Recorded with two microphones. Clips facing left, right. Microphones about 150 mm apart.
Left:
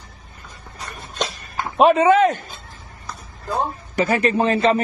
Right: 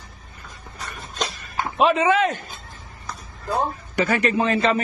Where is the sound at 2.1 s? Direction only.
35° left (ahead or behind).